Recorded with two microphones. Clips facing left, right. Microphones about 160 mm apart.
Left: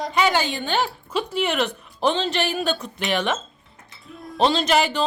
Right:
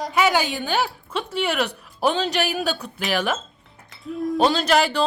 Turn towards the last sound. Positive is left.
turn(degrees=0)  # may be behind; listen again after turning